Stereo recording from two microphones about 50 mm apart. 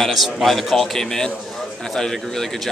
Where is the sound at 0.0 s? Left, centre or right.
Centre.